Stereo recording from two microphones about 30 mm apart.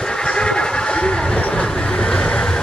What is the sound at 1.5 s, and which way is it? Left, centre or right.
Train, left.